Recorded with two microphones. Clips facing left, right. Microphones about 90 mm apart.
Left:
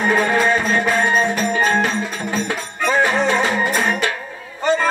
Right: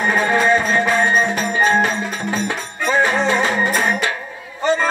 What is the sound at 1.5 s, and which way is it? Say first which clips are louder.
Music: right 4 dB; 25° right (ahead or behind).